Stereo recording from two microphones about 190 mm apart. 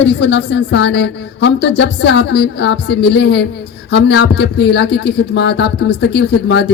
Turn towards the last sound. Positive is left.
turn(degrees=60)  # may be behind; listen again after turning